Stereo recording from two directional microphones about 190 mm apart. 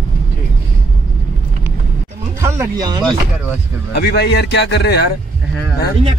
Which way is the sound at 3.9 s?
60° left (ahead or behind).